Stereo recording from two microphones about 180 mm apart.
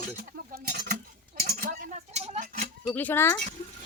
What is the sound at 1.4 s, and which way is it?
Cutlery, 50° right (ahead or behind).